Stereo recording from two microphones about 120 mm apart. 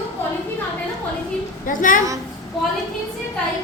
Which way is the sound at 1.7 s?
90° left.